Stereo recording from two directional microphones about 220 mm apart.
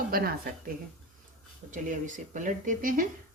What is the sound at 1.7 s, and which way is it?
Speech, 35° right (ahead or behind).